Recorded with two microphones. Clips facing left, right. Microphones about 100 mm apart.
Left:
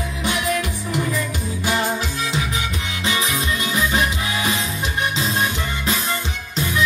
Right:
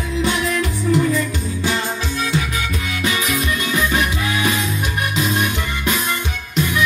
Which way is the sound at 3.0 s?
25° left (ahead or behind).